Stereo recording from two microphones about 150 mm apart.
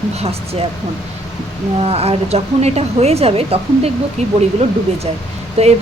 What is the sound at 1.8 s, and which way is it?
A woman's voice, 40° right (ahead or behind).